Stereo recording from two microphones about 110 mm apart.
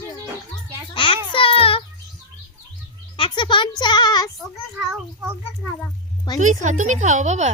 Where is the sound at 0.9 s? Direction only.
50° left (ahead or behind).